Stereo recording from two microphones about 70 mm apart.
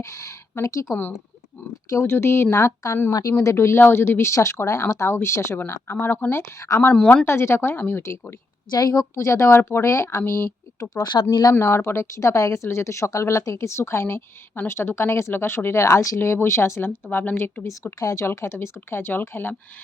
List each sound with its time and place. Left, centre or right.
0.0 s a sound: left
1.9 s speech: left
3.1 s a woman's voice: left
3.4 s speech: left
5.9 s speech: left
6.7 s a woman's voice: left
7.3 s speech: left
8.9 s speech: left
11.0 s speech: left
11.6 s speech: left
17.1 s speech: left
18.0 s speech: left
18.3 s speech: left